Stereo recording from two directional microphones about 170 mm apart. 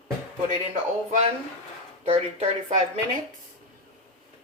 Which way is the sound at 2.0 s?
35° right (ahead or behind).